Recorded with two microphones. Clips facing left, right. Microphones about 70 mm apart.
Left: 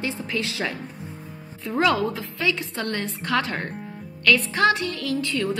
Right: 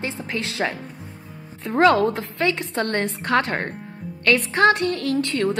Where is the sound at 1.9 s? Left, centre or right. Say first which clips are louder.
Right 5 dB; right.